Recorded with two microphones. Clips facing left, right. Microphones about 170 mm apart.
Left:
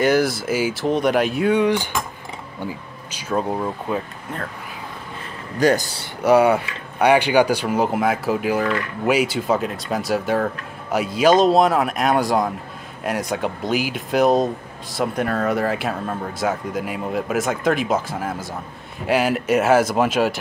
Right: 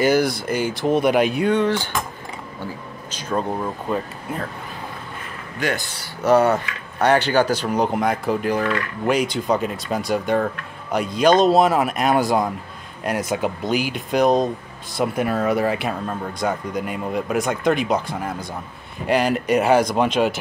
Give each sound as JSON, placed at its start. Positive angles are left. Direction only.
{"t": 0.0, "sound": "speech", "side_deg": 0}
{"t": 4.3, "sound": "speech", "side_deg": -10}
{"t": 5.6, "sound": "a man's voice", "side_deg": 40}
{"t": 6.2, "sound": "speech", "side_deg": 10}